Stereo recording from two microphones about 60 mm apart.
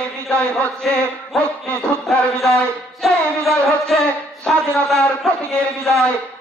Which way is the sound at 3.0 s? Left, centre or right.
Centre.